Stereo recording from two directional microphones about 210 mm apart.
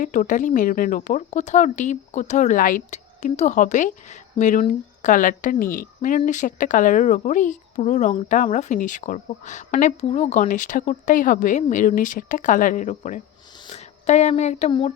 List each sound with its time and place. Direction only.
0.0 s speech: 40° left (ahead or behind)
13.7 s a sound: 30° left (ahead or behind)
14.7 s speech: 25° left (ahead or behind)